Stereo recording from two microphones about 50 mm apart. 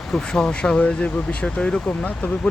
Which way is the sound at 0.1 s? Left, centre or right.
Centre.